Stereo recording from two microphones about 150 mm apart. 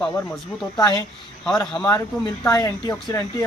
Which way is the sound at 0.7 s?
25° left (ahead or behind).